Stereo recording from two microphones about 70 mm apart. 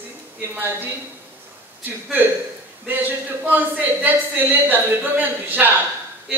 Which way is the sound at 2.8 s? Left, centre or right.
Right.